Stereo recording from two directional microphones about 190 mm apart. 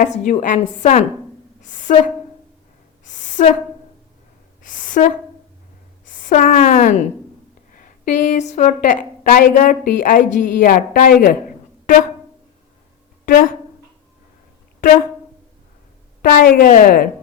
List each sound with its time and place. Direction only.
0.3 s a woman's voice: 40° left (ahead or behind)
3.1 s a sound: 40° left (ahead or behind)
4.7 s speech: 45° left (ahead or behind)
6.1 s a sound: 45° left (ahead or behind)
7.7 s a woman's voice: 45° left (ahead or behind)
13.2 s speech: 45° left (ahead or behind)
16.2 s a woman's voice: 50° left (ahead or behind)